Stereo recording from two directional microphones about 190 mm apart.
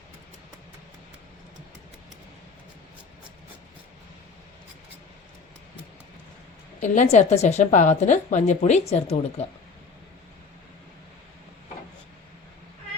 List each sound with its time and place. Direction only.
6.7 s a woman's voice: 40° left (ahead or behind)